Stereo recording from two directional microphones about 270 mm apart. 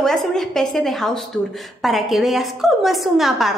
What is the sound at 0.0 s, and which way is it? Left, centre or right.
A woman's voice, centre.